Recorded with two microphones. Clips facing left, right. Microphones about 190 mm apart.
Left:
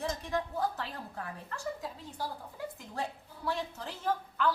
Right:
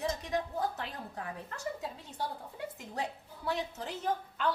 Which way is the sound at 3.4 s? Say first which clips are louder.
Even; 20° right (ahead or behind).